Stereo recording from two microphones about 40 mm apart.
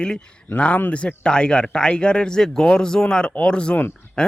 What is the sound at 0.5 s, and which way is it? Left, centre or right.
Speech, left.